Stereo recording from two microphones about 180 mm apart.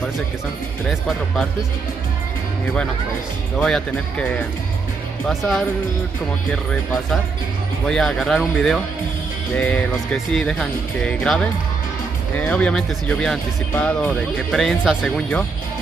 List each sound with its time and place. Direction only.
0.8 s speech: centre (ahead or behind)
3.5 s speech: 5° left (ahead or behind)
6.5 s speech: 5° left (ahead or behind)